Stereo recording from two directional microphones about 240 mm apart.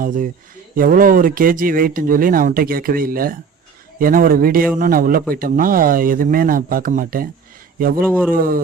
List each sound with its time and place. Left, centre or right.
0.0 s speech: right